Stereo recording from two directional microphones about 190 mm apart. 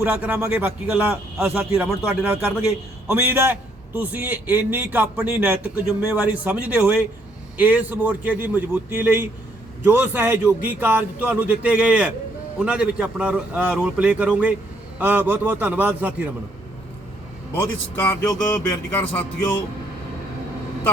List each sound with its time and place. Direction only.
0.0 s a man's voice: 10° right (ahead or behind)
17.5 s speech: 10° left (ahead or behind)